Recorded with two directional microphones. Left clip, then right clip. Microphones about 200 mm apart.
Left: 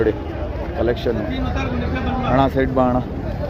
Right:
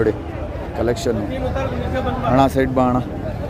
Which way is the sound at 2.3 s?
30° right (ahead or behind).